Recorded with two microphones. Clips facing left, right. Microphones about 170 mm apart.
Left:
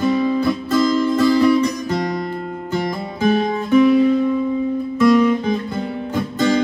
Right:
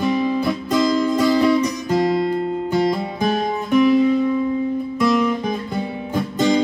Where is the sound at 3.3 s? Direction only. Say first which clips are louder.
Left 3 dB; centre (ahead or behind).